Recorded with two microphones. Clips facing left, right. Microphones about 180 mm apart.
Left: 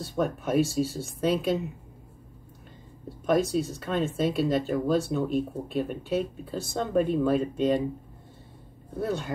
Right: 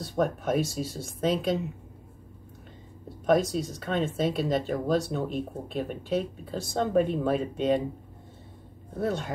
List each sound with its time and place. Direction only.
0.0 s speech: centre (ahead or behind)
3.3 s speech: centre (ahead or behind)
8.9 s speech: centre (ahead or behind)